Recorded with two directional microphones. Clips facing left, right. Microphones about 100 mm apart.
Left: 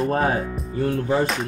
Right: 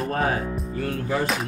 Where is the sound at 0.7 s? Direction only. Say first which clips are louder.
Left 6 dB; 30° left (ahead or behind).